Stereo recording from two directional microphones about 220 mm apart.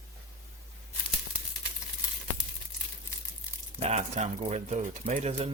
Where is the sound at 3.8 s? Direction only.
30° right (ahead or behind).